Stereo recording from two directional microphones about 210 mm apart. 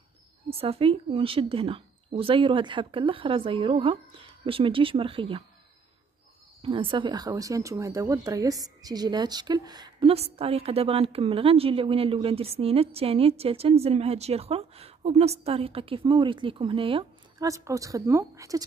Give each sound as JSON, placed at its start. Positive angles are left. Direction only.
{"t": 0.5, "sound": "speech", "side_deg": -25}
{"t": 6.6, "sound": "speech", "side_deg": -25}